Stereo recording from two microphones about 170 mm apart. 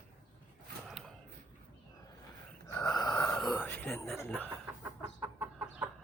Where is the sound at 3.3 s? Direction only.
Centre (ahead or behind).